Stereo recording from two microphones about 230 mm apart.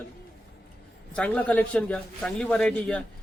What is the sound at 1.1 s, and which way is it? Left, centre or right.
Speech, centre.